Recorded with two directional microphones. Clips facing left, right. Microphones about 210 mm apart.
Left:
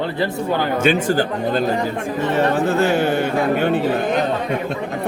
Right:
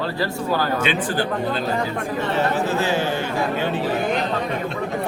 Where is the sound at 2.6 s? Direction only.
55° left (ahead or behind).